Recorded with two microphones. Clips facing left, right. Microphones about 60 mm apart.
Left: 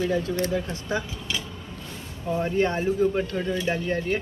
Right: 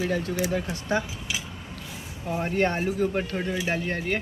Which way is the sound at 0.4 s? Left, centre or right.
Centre.